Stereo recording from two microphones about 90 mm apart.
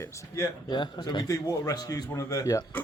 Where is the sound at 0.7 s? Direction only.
55° left (ahead or behind).